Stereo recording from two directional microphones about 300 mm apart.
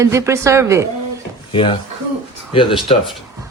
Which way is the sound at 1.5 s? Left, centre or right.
Centre.